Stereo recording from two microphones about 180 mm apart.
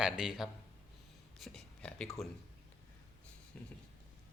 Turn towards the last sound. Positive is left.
turn(degrees=10)  # may be behind; listen again after turning